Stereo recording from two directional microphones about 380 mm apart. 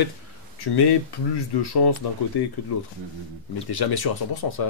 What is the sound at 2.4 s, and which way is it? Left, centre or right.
Speech, left.